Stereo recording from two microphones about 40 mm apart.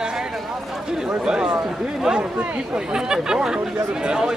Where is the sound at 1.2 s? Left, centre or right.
Centre.